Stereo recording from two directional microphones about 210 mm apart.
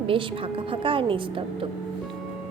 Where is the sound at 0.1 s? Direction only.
25° right (ahead or behind).